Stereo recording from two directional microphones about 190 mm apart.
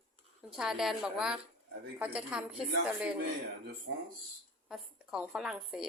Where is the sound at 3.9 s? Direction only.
70° right (ahead or behind).